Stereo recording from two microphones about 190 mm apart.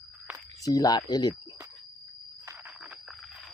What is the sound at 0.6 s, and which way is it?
Speech, 20° left (ahead or behind).